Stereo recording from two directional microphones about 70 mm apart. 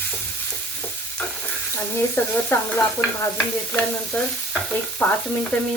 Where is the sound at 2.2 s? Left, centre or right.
Left.